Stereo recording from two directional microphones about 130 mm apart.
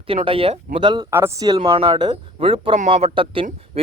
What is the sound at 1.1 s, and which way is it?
Speech, 20° right (ahead or behind).